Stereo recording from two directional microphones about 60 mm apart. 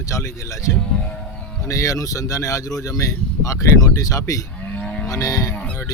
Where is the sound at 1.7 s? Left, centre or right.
Left.